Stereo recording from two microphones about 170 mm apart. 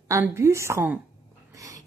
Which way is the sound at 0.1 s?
15° right (ahead or behind).